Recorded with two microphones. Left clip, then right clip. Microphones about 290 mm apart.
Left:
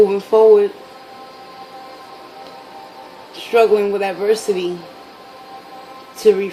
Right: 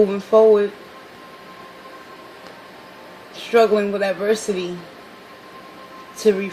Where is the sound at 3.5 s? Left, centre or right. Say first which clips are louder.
Left 3 dB; centre.